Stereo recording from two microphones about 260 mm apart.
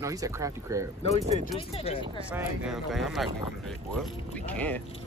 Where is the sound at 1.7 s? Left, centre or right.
Left.